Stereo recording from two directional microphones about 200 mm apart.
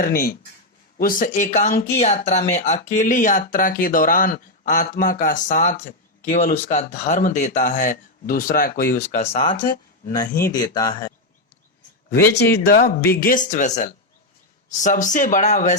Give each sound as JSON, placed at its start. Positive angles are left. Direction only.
{"t": 0.0, "sound": "speech", "side_deg": 50}
{"t": 12.3, "sound": "speech", "side_deg": 55}